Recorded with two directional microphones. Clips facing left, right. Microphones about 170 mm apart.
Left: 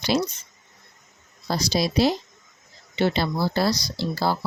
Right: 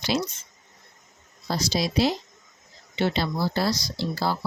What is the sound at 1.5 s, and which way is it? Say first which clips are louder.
Speech: left 2 dB; 35° left (ahead or behind).